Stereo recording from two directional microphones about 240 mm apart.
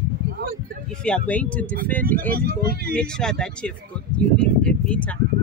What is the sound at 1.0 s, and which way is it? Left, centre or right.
Speech, centre.